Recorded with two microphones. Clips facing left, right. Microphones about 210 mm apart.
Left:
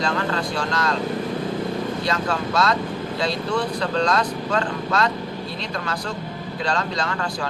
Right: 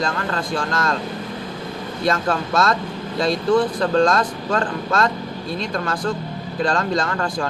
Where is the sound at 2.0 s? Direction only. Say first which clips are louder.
Right 3 dB; 50° right (ahead or behind).